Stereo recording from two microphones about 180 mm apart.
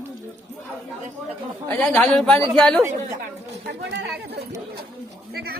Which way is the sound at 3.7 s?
65° right (ahead or behind).